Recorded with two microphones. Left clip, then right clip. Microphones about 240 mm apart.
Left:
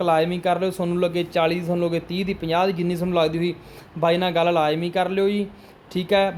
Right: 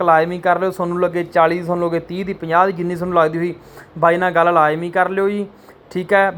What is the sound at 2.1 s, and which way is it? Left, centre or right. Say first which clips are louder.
Speech: right 2 dB; right.